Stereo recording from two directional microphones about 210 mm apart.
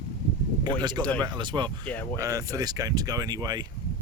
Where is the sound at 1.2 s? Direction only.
20° right (ahead or behind).